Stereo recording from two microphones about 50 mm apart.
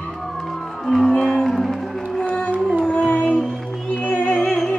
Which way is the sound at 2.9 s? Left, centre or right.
Left.